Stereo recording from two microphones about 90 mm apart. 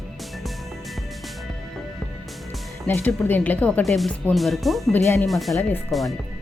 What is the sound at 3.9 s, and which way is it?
Speech, centre (ahead or behind).